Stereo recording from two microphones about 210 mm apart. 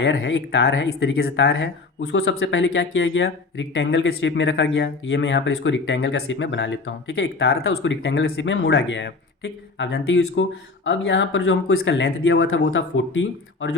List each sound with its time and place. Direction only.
0.0 s speech: 60° left (ahead or behind)
7.7 s speech: 85° left
8.0 s speech: 55° left (ahead or behind)